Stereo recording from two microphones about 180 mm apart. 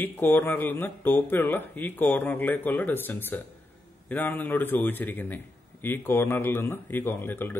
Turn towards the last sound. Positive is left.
turn(degrees=10)  # may be behind; listen again after turning